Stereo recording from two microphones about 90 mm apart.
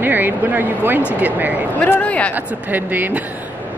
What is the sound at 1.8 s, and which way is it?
Speech, 15° left (ahead or behind).